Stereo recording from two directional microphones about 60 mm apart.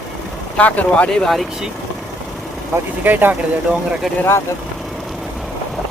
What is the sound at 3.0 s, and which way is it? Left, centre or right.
Speech, right.